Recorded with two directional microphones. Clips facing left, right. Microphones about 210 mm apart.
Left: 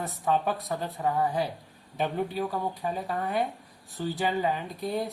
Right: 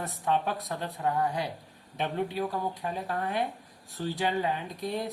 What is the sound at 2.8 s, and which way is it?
Speech, centre (ahead or behind).